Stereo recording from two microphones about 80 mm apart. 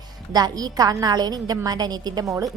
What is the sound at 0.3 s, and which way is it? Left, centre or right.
A woman's voice, right.